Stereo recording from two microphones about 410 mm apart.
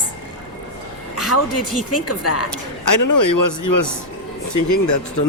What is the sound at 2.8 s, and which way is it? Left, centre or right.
Speech, left.